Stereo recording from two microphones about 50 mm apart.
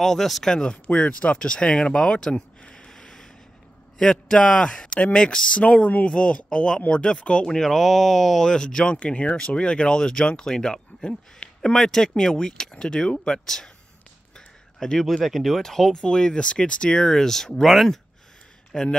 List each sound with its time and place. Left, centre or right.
0.0 s speech: centre
0.8 s speech: left
5.6 s speech: left; by 13.7 s centre
14.8 s speech: centre
15.2 s speech: centre